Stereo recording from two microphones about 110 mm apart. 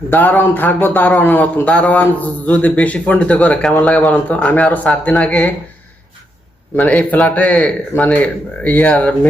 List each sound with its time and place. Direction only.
0.1 s a man's voice: 15° left (ahead or behind)
6.7 s a man's voice: 15° left (ahead or behind)